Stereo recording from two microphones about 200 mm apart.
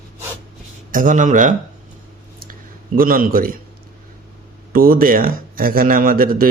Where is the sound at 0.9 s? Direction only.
40° right (ahead or behind).